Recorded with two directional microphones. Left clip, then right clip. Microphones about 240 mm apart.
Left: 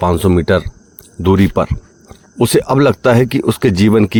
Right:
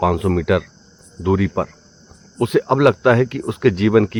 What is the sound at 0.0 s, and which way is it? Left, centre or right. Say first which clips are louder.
Speech: left 5 dB; left.